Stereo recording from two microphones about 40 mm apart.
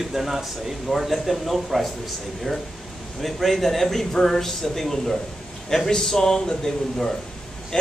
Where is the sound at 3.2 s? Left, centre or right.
Centre.